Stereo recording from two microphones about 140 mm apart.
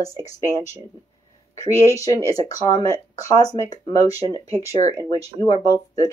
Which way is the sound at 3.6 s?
25° left (ahead or behind).